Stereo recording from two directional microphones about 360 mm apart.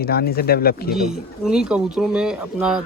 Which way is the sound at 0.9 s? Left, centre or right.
Centre.